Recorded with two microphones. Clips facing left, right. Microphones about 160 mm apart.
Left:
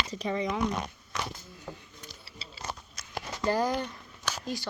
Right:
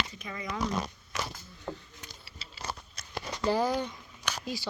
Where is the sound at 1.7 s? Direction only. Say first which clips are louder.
Right 4 dB; 75° right (ahead or behind).